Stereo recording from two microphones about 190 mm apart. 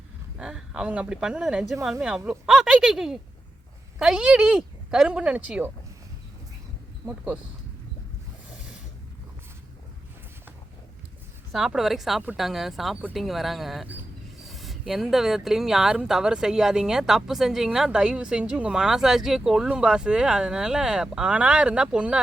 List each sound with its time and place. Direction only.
0.3 s speech: 5° right (ahead or behind)
7.0 s speech: 10° right (ahead or behind)
11.5 s speech: 5° right (ahead or behind)